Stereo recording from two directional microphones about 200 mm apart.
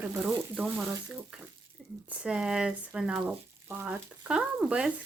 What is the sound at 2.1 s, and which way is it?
Speech, 5° right (ahead or behind).